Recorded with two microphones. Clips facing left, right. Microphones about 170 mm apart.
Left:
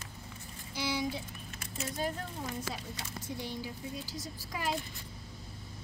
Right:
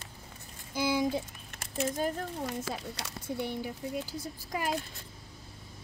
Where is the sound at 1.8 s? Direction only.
50° right (ahead or behind).